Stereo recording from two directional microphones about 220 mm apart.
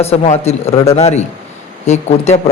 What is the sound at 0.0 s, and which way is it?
A man's voice, 30° left (ahead or behind).